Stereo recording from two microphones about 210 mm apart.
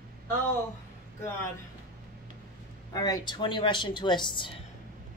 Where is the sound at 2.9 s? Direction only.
20° left (ahead or behind).